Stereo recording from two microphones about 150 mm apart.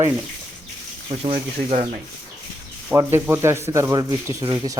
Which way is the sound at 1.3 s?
45° right (ahead or behind).